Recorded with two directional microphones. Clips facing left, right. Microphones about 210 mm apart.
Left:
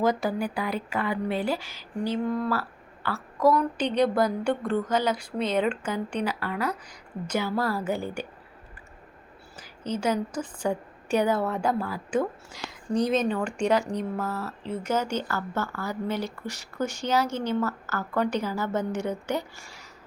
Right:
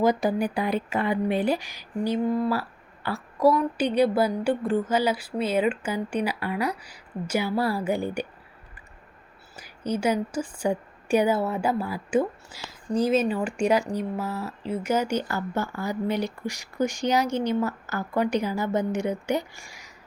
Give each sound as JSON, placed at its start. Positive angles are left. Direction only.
{"t": 0.0, "sound": "speech", "side_deg": -15}
{"t": 9.6, "sound": "speech", "side_deg": -10}